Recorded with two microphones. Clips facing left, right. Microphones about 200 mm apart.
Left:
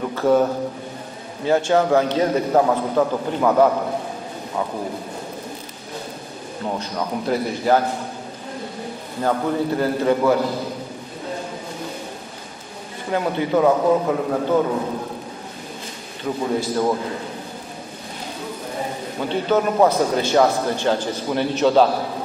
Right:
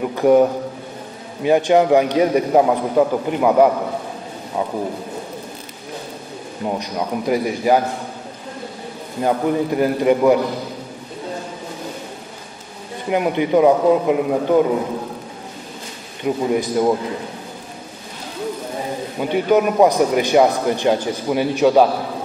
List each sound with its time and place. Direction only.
0.0 s a man's voice: 15° right (ahead or behind)
6.6 s a man's voice: 15° right (ahead or behind)
9.2 s a man's voice: 15° right (ahead or behind)
13.1 s a man's voice: 15° right (ahead or behind)
16.3 s a man's voice: 15° right (ahead or behind)
19.1 s a man's voice: 15° right (ahead or behind)